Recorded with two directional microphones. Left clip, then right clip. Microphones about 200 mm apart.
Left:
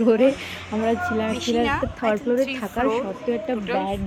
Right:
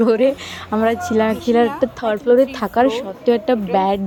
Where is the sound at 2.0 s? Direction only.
30° right (ahead or behind).